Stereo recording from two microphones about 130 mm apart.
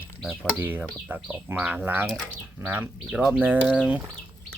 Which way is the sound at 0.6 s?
15° right (ahead or behind).